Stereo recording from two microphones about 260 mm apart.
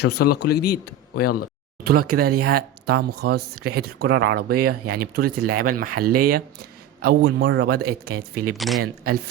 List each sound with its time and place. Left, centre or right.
0.0 s speech: left
1.8 s a man's voice: right
7.9 s speech: right
8.5 s speech: centre
8.8 s a man's voice: right